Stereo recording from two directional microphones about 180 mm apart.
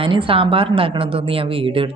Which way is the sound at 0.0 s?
30° right (ahead or behind).